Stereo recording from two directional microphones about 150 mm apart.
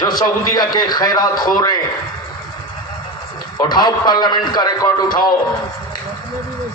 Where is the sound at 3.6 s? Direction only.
30° left (ahead or behind).